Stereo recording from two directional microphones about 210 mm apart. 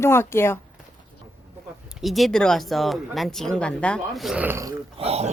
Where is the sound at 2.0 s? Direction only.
Centre (ahead or behind).